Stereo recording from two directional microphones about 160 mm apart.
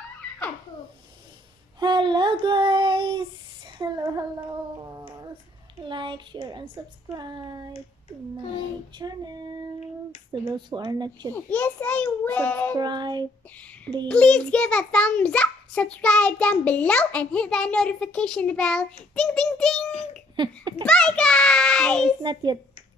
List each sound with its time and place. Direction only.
1.8 s child singing: 30° right (ahead or behind)
5.9 s speech: 30° right (ahead or behind)
8.9 s speech: 25° right (ahead or behind)
11.3 s a child's voice: 10° left (ahead or behind)
12.7 s speech: 25° right (ahead or behind)
14.0 s a child's voice: 5° left (ahead or behind)
22.2 s speech: 30° right (ahead or behind)